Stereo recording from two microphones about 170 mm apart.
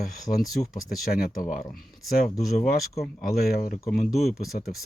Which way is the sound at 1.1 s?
55° left (ahead or behind).